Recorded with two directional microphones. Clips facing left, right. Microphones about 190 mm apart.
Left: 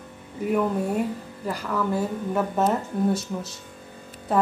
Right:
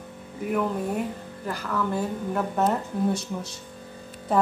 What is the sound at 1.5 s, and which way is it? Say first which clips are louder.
Speech: left 2 dB; 10° left (ahead or behind).